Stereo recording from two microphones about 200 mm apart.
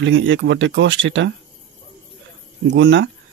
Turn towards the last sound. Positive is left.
turn(degrees=-65)  # may be behind; listen again after turning